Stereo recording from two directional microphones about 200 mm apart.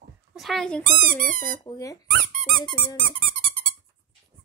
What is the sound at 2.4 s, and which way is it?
Squeak, 5° left (ahead or behind).